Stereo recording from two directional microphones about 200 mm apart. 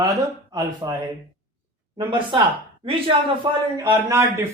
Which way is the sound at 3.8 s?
15° right (ahead or behind).